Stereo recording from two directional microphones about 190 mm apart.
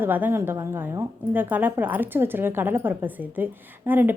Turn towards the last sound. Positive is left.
turn(degrees=-10)  # may be behind; listen again after turning